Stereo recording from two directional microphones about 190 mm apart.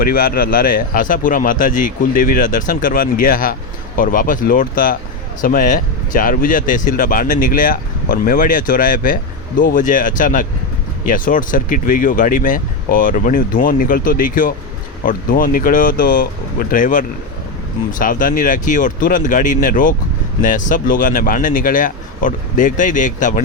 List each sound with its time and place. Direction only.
0.0 s speech: 50° left (ahead or behind)